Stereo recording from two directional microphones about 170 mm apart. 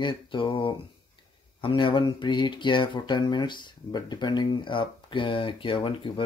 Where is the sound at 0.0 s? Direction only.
30° left (ahead or behind).